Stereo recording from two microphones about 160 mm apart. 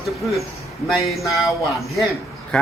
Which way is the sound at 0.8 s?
Centre (ahead or behind).